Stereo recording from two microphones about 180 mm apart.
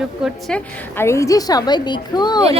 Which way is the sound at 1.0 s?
15° left (ahead or behind).